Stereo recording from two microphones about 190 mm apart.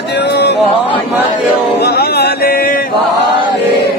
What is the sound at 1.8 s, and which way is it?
Music, 60° left (ahead or behind).